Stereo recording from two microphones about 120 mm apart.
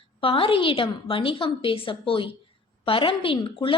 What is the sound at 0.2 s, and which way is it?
A woman's voice, 50° left (ahead or behind).